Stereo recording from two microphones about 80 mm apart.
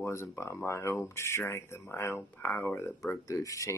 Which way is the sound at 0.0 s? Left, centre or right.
Left.